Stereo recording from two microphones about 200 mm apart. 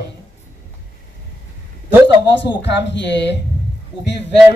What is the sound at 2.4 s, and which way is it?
Speech, 60° left (ahead or behind).